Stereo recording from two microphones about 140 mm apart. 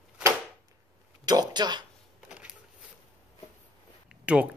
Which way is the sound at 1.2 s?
30° right (ahead or behind).